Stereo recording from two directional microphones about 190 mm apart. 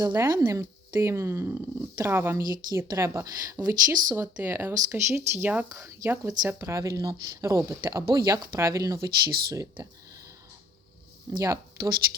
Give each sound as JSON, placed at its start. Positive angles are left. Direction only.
{"t": 0.0, "sound": "speech", "side_deg": -20}
{"t": 11.4, "sound": "speech", "side_deg": -20}